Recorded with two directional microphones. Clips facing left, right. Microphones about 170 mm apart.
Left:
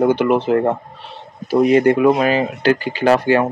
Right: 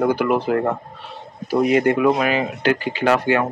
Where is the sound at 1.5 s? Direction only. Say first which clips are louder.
Left 4 dB; 30° left (ahead or behind).